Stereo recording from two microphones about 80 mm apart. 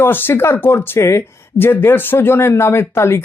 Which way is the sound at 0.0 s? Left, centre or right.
Left.